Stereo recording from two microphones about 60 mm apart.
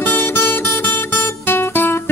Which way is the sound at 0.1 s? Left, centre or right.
Left.